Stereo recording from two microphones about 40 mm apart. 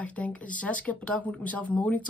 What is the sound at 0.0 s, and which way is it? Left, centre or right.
Speech, left.